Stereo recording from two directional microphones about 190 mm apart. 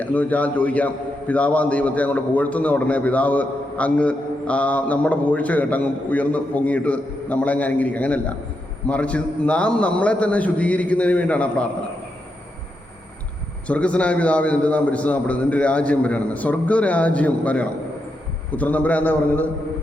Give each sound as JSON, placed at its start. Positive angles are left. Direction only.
{"t": 0.0, "sound": "a man's voice", "side_deg": 10}
{"t": 13.7, "sound": "a man's voice", "side_deg": 5}